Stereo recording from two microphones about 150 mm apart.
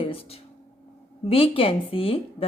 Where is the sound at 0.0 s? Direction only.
40° left (ahead or behind).